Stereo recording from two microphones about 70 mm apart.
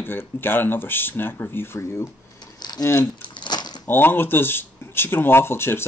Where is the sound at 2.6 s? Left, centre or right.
Left.